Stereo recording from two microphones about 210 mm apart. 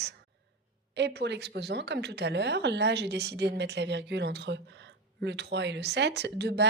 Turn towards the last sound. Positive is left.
turn(degrees=-55)  # may be behind; listen again after turning